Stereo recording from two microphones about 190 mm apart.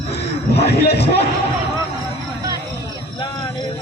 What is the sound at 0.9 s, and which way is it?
Speech, 30° left (ahead or behind).